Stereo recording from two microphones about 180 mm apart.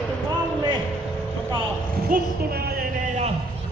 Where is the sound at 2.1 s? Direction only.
60° right (ahead or behind).